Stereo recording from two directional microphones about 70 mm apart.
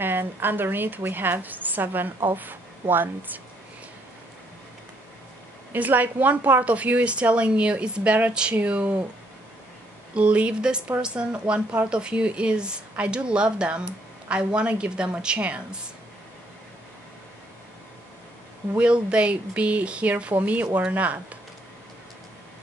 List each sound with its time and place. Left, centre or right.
0.0 s a woman's voice: right
5.7 s a woman's voice: right
10.1 s a woman's voice: centre
18.8 s a woman's voice: centre